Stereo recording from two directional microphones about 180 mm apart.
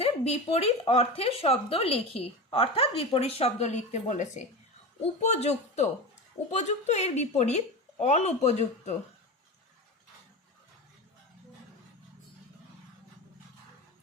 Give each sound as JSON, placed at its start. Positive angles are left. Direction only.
{"t": 0.0, "sound": "speech", "side_deg": 35}